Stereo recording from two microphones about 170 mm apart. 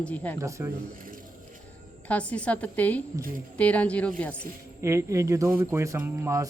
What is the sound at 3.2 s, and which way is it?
Speech, 55° right (ahead or behind).